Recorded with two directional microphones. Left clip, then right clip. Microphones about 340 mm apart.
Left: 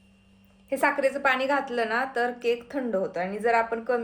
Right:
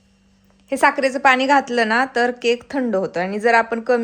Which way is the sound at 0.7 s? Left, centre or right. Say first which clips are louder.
Right 7 dB; right.